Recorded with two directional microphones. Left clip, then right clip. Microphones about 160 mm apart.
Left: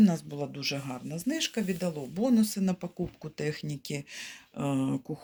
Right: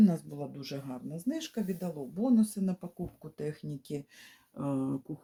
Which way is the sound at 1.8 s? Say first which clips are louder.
Left 5 dB; 15° left (ahead or behind).